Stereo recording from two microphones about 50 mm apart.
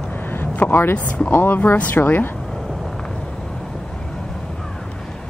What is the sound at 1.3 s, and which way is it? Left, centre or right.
Speech, left.